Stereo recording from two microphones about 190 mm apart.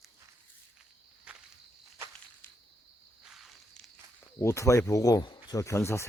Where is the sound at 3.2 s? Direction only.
Centre (ahead or behind).